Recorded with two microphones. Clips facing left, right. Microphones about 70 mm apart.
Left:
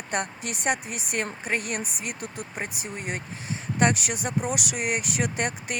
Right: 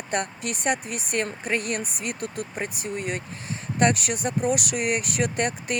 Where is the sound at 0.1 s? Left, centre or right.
Centre.